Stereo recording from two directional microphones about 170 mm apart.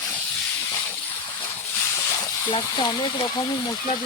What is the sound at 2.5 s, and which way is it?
Speech, 30° left (ahead or behind).